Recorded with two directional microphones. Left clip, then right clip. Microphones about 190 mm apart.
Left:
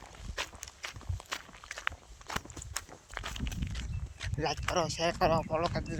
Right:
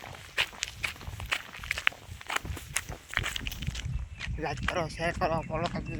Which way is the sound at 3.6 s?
55° right (ahead or behind).